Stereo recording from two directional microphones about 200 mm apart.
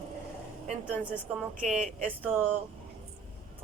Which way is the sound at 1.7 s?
5° right (ahead or behind).